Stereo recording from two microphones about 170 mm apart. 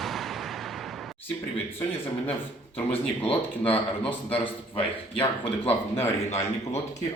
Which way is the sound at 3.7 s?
35° left (ahead or behind).